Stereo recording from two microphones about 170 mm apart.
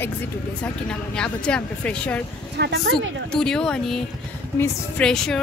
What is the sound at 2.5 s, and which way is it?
Speech, 75° right (ahead or behind).